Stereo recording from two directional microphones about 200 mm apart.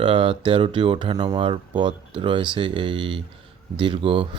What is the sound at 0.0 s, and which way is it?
Speech, 25° right (ahead or behind).